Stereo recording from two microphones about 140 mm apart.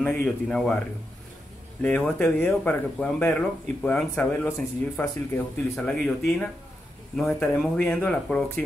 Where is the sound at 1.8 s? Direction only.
10° left (ahead or behind).